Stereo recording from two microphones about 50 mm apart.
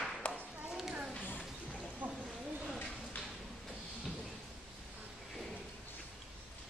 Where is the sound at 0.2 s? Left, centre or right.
Left.